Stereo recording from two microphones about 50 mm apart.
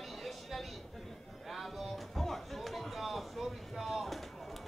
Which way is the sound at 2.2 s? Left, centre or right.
Centre.